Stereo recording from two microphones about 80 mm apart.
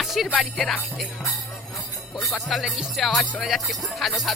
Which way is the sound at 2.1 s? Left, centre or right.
Centre.